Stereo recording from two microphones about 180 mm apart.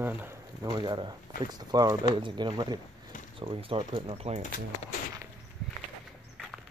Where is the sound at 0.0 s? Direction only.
10° right (ahead or behind); by 4.4 s 35° right (ahead or behind).